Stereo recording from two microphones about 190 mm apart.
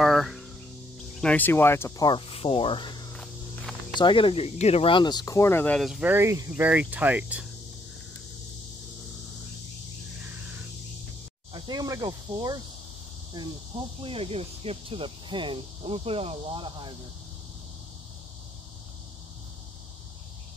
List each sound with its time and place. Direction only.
0.0 s cricket: centre (ahead or behind)
1.2 s speech: 10° left (ahead or behind)
3.1 s walk: 5° left (ahead or behind)
4.0 s speech: 25° left (ahead or behind); by 7.4 s 5° right (ahead or behind)
11.5 s speech: 25° right (ahead or behind)